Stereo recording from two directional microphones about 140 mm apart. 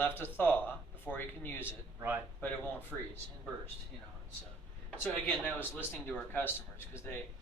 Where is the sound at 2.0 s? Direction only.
15° right (ahead or behind).